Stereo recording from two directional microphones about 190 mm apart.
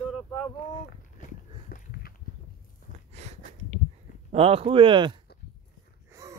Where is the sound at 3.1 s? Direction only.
35° right (ahead or behind).